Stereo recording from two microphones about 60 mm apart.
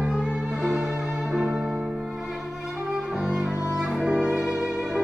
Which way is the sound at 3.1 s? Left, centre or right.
Centre.